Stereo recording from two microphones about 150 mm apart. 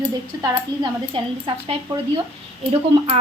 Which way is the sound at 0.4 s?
30° right (ahead or behind).